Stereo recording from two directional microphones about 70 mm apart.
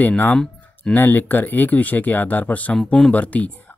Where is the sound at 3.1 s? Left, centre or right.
Left.